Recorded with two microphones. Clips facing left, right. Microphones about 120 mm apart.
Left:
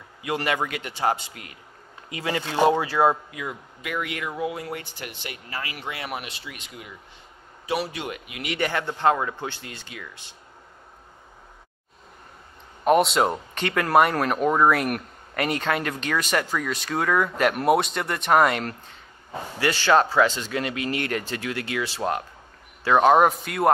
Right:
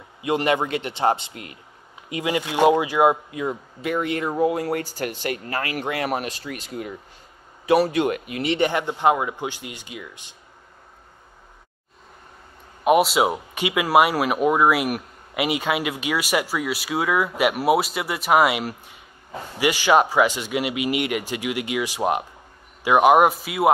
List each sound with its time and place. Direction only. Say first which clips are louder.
0.2 s a man's voice: right 5 dB; 25° right (ahead or behind)
3.3 s speech: right 7 dB; 30° right (ahead or behind); by 8.4 s 50° right (ahead or behind)
8.4 s speech: right 4 dB; 25° right (ahead or behind)
12.8 s speech: right 2 dB; 5° right (ahead or behind)